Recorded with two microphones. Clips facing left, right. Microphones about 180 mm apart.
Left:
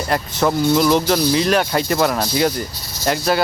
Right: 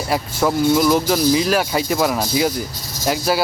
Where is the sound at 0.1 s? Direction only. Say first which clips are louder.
Even; 5° right (ahead or behind).